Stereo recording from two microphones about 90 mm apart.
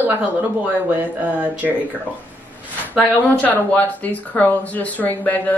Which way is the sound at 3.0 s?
15° left (ahead or behind).